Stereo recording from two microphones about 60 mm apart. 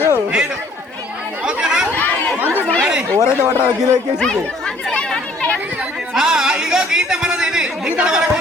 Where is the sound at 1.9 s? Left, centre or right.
Left.